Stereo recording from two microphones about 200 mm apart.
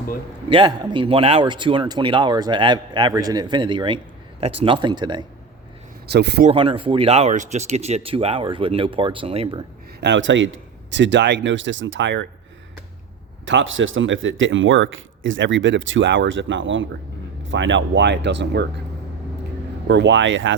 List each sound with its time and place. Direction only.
0.5 s a man's voice: 25° right (ahead or behind)
6.1 s speech: 55° right (ahead or behind)
6.5 s a man's voice: 25° right (ahead or behind)
10.0 s speech: 65° right (ahead or behind)
13.4 s speech: 70° right (ahead or behind)
19.9 s speech: 60° right (ahead or behind)